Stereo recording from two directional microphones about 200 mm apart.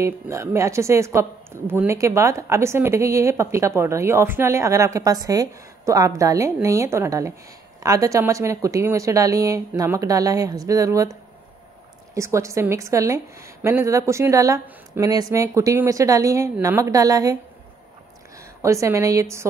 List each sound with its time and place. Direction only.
0.0 s speech: 15° right (ahead or behind)
12.1 s speech: 15° right (ahead or behind)
18.6 s speech: 15° right (ahead or behind)